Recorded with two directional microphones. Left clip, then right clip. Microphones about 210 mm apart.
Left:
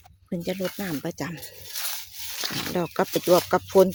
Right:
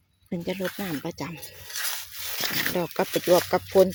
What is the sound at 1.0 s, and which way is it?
Speech, 30° left (ahead or behind).